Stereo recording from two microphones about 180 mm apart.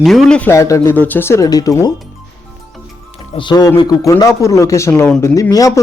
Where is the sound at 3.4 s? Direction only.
25° left (ahead or behind).